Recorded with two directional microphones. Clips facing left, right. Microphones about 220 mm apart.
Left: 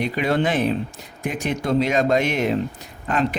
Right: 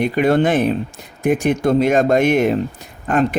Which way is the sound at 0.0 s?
50° right (ahead or behind).